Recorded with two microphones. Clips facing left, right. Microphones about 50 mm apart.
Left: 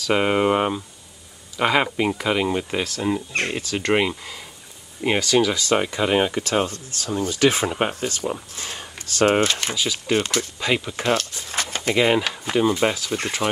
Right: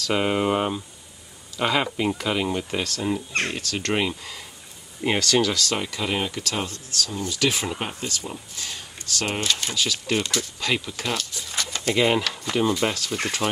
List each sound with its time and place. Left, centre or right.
0.1 s speech: centre; by 9.6 s left
9.8 s speech: centre
10.1 s speech: left
10.6 s speech: left
11.1 s a sound: left
12.2 s speech: left